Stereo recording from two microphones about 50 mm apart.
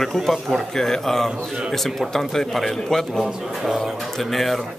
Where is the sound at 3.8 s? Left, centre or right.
Centre.